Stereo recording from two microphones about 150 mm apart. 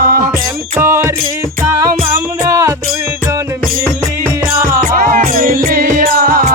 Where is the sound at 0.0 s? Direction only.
85° right.